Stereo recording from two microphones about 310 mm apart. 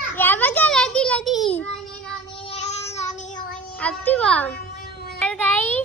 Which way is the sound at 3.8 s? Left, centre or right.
Centre.